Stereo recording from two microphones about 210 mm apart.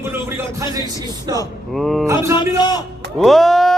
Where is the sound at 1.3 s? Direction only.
20° right (ahead or behind).